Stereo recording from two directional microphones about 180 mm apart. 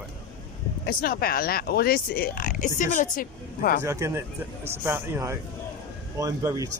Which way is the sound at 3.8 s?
15° right (ahead or behind).